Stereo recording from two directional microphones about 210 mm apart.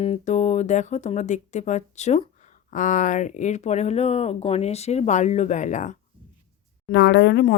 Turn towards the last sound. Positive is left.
turn(degrees=55)  # may be behind; listen again after turning